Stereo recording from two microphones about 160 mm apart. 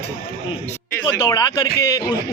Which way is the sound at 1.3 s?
25° left (ahead or behind).